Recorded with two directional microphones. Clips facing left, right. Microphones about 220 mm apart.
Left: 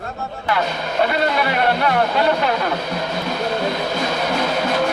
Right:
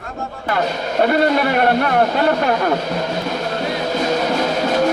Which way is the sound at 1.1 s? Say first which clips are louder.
Right 4 dB; 45° right (ahead or behind).